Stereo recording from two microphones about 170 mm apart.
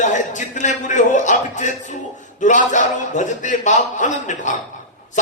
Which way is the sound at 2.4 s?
45° left (ahead or behind).